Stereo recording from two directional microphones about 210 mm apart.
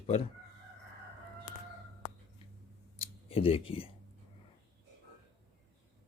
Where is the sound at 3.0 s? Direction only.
25° left (ahead or behind).